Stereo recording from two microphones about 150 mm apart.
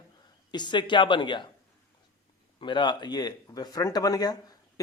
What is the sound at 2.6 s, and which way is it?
Speech, 30° left (ahead or behind).